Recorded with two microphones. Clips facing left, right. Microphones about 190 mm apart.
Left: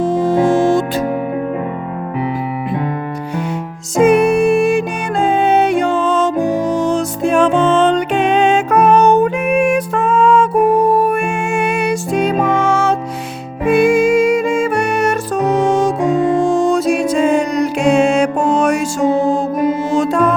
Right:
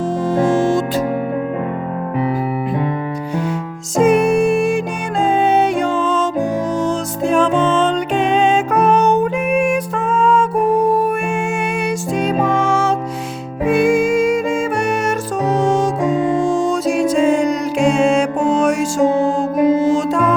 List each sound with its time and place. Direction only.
0.0 s music: 65° left (ahead or behind)
3.9 s music: 65° left (ahead or behind)
19.9 s music: 65° left (ahead or behind)